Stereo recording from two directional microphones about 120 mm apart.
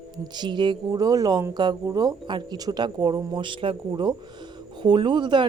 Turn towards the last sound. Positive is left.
turn(degrees=-40)  # may be behind; listen again after turning